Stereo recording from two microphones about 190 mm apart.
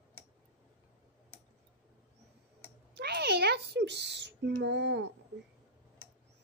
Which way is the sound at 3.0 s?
60° right (ahead or behind).